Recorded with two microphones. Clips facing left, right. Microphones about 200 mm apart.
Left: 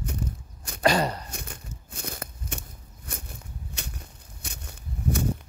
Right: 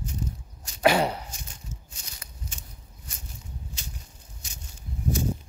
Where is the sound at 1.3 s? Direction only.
60° left (ahead or behind).